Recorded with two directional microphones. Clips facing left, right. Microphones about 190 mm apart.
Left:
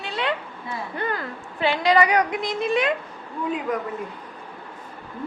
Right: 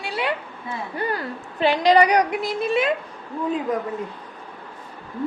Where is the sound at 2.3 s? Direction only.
5° right (ahead or behind).